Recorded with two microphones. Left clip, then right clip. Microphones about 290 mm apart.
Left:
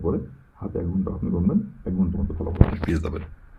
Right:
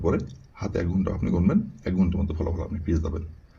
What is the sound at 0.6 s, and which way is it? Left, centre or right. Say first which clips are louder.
Speech: right 1 dB; right.